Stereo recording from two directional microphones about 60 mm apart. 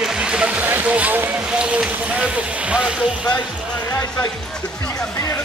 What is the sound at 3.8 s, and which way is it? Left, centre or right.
Music, left.